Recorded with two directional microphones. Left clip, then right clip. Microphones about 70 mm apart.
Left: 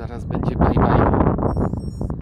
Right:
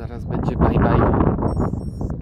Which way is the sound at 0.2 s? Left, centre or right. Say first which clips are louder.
Even; left.